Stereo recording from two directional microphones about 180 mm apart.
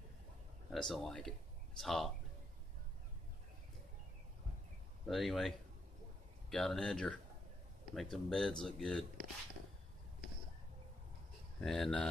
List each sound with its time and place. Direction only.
0.7 s speech: centre (ahead or behind)
5.0 s speech: centre (ahead or behind)
6.5 s speech: 5° left (ahead or behind)
11.6 s speech: centre (ahead or behind)